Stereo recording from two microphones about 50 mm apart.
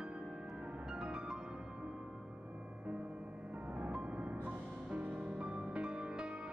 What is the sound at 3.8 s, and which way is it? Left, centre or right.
Music, right.